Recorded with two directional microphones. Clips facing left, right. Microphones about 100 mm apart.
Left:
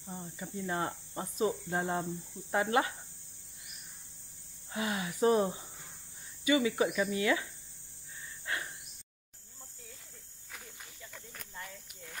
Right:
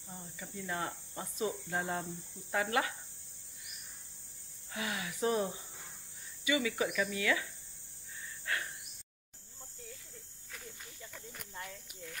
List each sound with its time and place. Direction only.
0.0 s cricket: 30° left (ahead or behind)
4.7 s cricket: 30° left (ahead or behind)
8.5 s a sound: 20° left (ahead or behind)